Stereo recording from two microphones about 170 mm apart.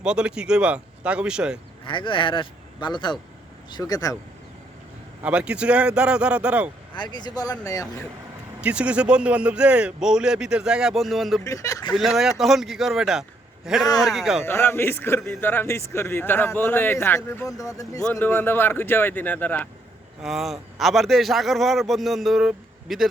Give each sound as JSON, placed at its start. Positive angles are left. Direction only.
{"t": 0.0, "sound": "a man's voice", "side_deg": -5}
{"t": 1.9, "sound": "speech", "side_deg": 30}
{"t": 5.2, "sound": "speech", "side_deg": -5}
{"t": 6.9, "sound": "speech", "side_deg": 25}
{"t": 8.6, "sound": "a man's voice", "side_deg": -5}
{"t": 11.4, "sound": "speech", "side_deg": 20}
{"t": 11.9, "sound": "a man's voice", "side_deg": 0}
{"t": 14.4, "sound": "a man's voice", "side_deg": 15}
{"t": 20.2, "sound": "a man's voice", "side_deg": 0}